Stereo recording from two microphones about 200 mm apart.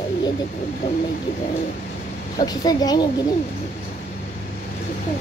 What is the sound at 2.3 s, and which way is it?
Speech, 20° left (ahead or behind).